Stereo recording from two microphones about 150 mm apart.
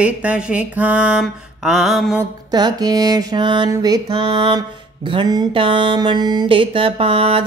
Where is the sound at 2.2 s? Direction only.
30° right (ahead or behind).